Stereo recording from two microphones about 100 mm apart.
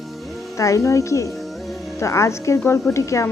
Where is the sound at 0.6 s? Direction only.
30° left (ahead or behind).